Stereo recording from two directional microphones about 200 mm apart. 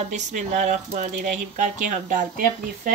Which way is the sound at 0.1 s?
35° right (ahead or behind).